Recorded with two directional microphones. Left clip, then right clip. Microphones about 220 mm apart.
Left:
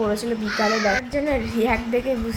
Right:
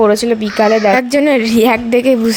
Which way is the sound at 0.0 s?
40° right (ahead or behind).